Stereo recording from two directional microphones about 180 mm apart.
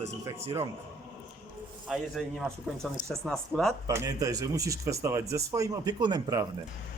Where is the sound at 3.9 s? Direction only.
20° right (ahead or behind).